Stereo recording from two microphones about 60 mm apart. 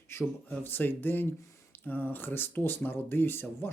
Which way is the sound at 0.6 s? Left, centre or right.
Left.